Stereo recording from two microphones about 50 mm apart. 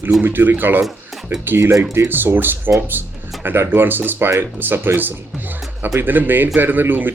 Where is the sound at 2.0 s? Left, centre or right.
Right.